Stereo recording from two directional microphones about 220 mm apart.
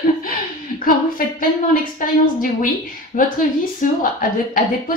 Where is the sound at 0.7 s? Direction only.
40° left (ahead or behind).